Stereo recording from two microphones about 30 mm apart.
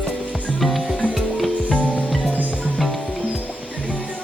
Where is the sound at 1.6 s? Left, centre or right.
Left.